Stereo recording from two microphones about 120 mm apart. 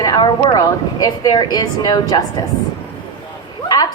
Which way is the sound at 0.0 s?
35° left (ahead or behind).